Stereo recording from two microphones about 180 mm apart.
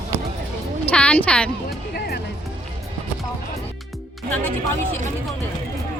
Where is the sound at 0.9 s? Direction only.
5° left (ahead or behind).